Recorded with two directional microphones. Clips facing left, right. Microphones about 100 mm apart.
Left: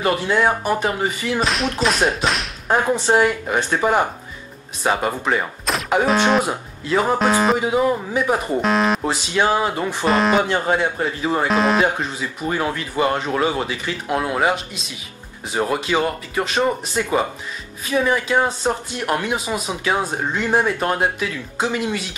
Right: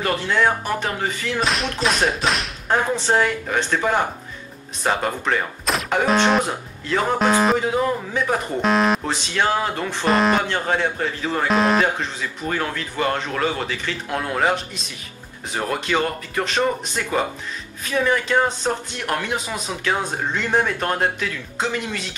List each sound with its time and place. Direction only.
0.0 s speech: 15° left (ahead or behind)
1.4 s whip: centre (ahead or behind)
2.7 s speech: 15° left (ahead or behind)
6.0 s whip: centre (ahead or behind)
6.9 s speech: 15° left (ahead or behind)
7.2 s whip: centre (ahead or behind)
7.5 s speech: 10° left (ahead or behind)
8.5 s whip: centre (ahead or behind)
9.0 s speech: 15° left (ahead or behind)
10.0 s whip: centre (ahead or behind)
10.4 s speech: 15° left (ahead or behind)
11.4 s whip: centre (ahead or behind)
11.8 s speech: 15° left (ahead or behind)